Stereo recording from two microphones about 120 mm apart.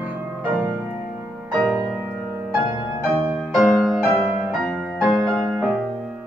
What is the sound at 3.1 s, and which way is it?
Music, 5° right (ahead or behind).